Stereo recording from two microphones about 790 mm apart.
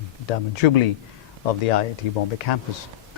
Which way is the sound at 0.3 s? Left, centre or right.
Left.